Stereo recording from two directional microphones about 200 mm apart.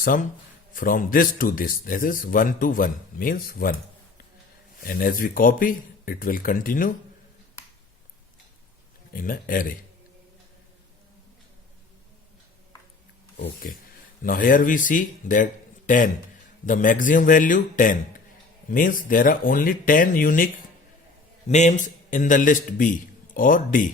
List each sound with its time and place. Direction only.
0.0 s a man's voice: 40° left (ahead or behind)
4.8 s a man's voice: 45° left (ahead or behind)
9.1 s a man's voice: 45° left (ahead or behind)
13.3 s a man's voice: 45° left (ahead or behind)
21.5 s a man's voice: 35° left (ahead or behind)